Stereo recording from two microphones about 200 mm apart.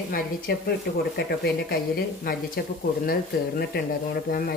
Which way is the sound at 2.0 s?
50° left (ahead or behind).